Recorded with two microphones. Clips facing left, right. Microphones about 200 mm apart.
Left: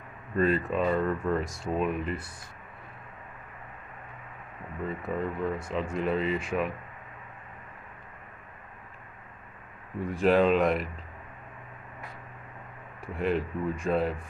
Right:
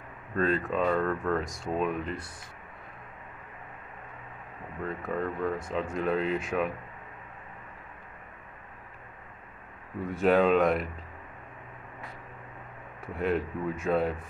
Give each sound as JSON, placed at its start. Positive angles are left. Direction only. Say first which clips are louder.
{"t": 0.4, "sound": "speech", "louder": "left 1 dB", "side_deg": 5}
{"t": 4.8, "sound": "speech", "louder": "even", "side_deg": 0}
{"t": 10.0, "sound": "speech", "louder": "even", "side_deg": 0}
{"t": 13.0, "sound": "speech", "louder": "even", "side_deg": 0}